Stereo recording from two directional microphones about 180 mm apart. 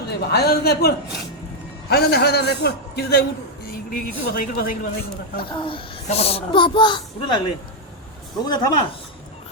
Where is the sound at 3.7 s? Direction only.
55° left (ahead or behind).